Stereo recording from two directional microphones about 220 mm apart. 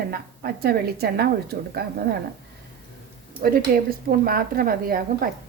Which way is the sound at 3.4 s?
45° right (ahead or behind).